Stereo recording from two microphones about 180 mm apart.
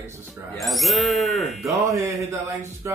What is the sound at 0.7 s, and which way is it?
Speech, centre (ahead or behind).